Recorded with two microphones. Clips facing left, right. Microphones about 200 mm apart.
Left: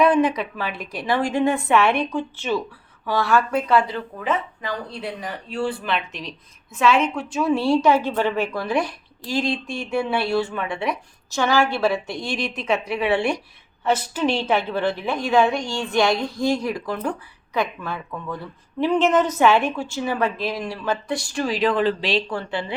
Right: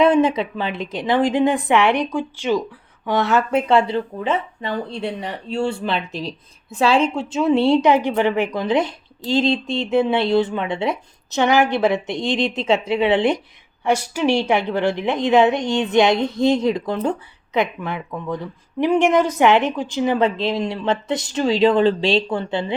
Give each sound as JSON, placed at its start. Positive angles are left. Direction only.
{"t": 0.0, "sound": "speech", "side_deg": -25}